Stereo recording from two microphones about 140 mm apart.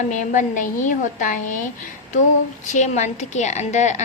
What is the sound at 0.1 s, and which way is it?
A woman's voice, 65° left (ahead or behind).